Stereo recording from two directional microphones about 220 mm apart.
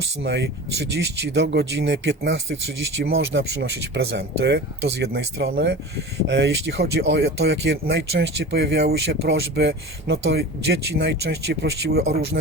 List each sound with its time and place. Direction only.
0.2 s speech: 50° right (ahead or behind)